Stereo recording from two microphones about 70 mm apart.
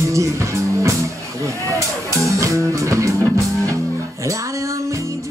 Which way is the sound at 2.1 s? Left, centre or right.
Right.